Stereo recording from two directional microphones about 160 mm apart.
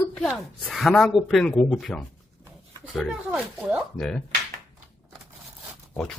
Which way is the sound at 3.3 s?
10° right (ahead or behind).